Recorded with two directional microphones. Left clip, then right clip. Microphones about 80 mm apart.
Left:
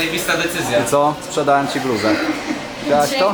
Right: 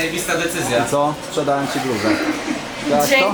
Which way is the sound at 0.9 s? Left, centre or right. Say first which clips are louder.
Left 3 dB; centre.